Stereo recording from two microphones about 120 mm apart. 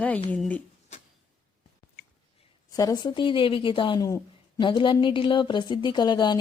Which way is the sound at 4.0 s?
30° left (ahead or behind).